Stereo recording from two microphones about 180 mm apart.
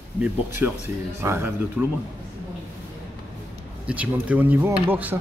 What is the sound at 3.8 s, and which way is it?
Speech, 10° right (ahead or behind).